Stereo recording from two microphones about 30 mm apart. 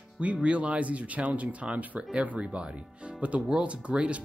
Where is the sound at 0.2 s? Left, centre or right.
Right.